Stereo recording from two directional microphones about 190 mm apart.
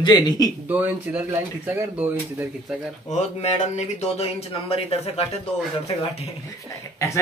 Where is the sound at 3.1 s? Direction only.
35° left (ahead or behind).